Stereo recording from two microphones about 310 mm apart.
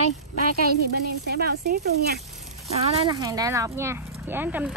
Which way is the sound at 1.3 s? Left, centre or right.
Right.